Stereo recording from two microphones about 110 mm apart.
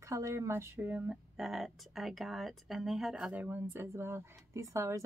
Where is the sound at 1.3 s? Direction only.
Centre (ahead or behind).